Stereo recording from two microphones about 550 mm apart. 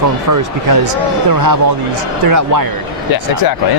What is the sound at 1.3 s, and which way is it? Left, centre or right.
A man's voice, right.